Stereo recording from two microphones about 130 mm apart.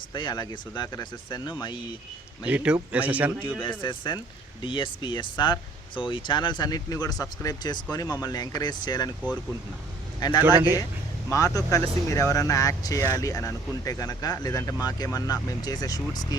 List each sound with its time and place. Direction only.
0.1 s speech: 35° left (ahead or behind)
2.5 s a man's voice: 10° right (ahead or behind)
3.8 s speech: 35° left (ahead or behind)
10.2 s speech: 30° left (ahead or behind)
10.4 s a man's voice: 15° right (ahead or behind)
11.3 s speech: 25° left (ahead or behind)